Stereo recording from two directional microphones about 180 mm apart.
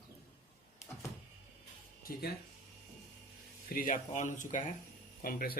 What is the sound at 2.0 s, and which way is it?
Speech, 55° left (ahead or behind).